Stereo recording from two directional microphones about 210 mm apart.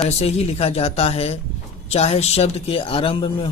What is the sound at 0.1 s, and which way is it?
A man's voice, 30° left (ahead or behind).